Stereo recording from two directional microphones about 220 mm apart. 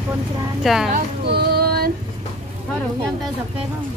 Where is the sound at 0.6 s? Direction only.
Centre (ahead or behind).